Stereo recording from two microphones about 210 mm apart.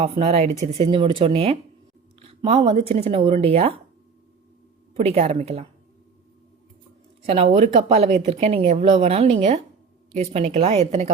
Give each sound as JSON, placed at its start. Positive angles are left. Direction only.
{"t": 0.0, "sound": "a woman's voice", "side_deg": -30}
{"t": 4.9, "sound": "speech", "side_deg": -30}
{"t": 7.3, "sound": "a woman's voice", "side_deg": -25}